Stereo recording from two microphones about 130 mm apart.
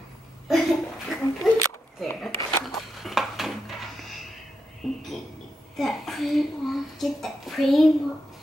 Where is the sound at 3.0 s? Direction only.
Centre (ahead or behind).